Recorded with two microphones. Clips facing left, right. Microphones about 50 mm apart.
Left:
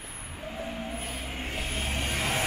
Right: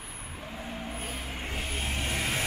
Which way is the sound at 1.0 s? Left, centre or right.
Centre.